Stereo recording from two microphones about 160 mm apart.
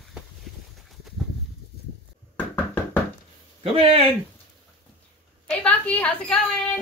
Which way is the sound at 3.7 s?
35° right (ahead or behind).